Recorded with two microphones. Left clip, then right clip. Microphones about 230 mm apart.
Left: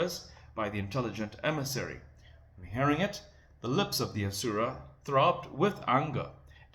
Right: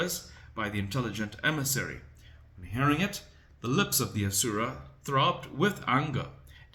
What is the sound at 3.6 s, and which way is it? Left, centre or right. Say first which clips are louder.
Speech: right 2 dB; right.